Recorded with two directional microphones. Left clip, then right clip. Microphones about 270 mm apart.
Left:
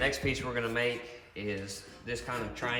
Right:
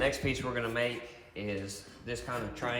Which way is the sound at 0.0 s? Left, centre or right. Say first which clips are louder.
Even; centre.